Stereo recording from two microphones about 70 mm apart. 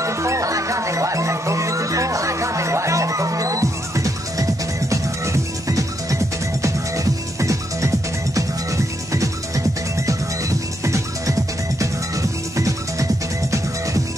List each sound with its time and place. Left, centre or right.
0.0 s music: right